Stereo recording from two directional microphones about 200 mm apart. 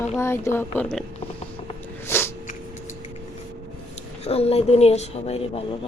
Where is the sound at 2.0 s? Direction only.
10° left (ahead or behind).